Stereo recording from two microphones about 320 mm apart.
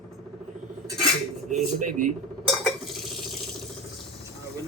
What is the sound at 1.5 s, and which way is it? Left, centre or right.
Speech, right.